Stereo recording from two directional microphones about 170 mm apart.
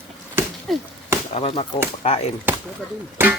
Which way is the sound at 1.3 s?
35° left (ahead or behind).